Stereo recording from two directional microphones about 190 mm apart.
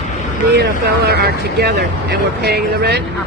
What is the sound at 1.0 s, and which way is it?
Speech, 55° right (ahead or behind).